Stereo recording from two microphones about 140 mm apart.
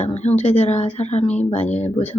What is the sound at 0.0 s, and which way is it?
Speech, 50° left (ahead or behind).